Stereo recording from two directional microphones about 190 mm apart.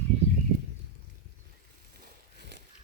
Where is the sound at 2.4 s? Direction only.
65° right (ahead or behind).